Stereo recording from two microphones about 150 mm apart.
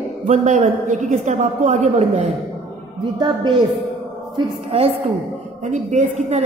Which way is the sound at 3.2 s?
30° right (ahead or behind).